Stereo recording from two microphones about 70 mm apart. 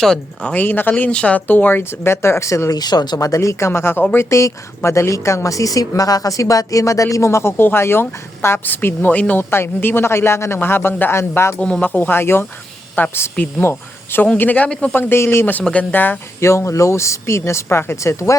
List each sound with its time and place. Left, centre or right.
0.0 s speech: centre
0.5 s speech: left
2.7 s speech: left
3.2 s speech: left
3.7 s speech: left
4.3 s speech: left
9.4 s speech: left
11.6 s speech: centre
11.9 s speech: left
14.3 s speech: left
14.7 s speech: centre
14.9 s speech: left
15.6 s speech: centre
16.4 s speech: left